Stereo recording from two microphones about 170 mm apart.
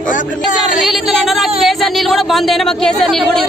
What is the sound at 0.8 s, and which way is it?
Speech, centre (ahead or behind).